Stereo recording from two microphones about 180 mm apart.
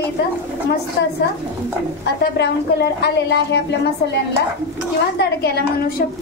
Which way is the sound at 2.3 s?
65° left (ahead or behind).